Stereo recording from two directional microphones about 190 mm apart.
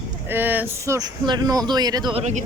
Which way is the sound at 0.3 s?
10° right (ahead or behind).